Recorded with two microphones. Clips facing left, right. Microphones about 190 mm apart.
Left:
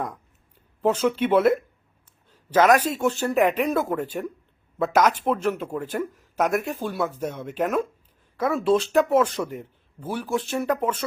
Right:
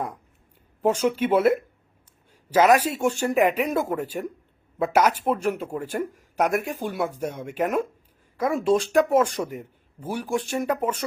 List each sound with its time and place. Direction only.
0.8 s speech: 10° right (ahead or behind)
8.6 s speech: 45° right (ahead or behind)
9.0 s speech: 10° right (ahead or behind)
9.2 s speech: 45° right (ahead or behind)
9.5 s a man's voice: 10° right (ahead or behind)